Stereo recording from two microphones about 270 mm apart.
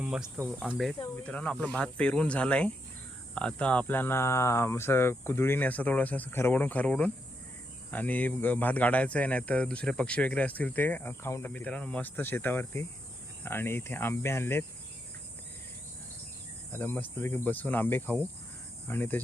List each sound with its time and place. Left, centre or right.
0.0 s speech: centre
0.9 s speech: centre
1.2 s speech: centre
16.7 s speech: centre